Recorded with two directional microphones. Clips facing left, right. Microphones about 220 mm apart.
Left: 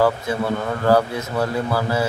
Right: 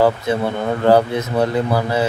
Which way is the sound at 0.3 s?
20° right (ahead or behind).